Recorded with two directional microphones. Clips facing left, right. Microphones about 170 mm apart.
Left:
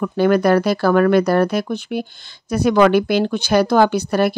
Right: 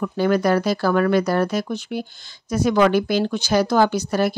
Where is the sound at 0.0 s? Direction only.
60° left (ahead or behind).